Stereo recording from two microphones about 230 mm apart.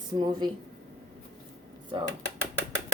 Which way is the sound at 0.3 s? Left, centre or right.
Centre.